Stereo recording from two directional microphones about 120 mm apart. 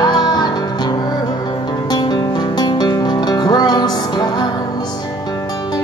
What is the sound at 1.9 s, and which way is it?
Music, 35° left (ahead or behind).